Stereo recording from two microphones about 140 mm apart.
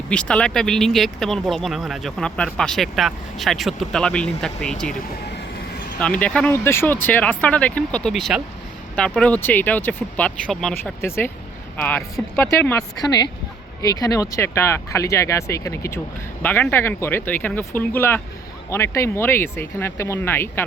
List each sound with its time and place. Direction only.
0.1 s speech: 5° left (ahead or behind)
6.0 s speech: 10° left (ahead or behind)
11.0 s speech: 15° left (ahead or behind)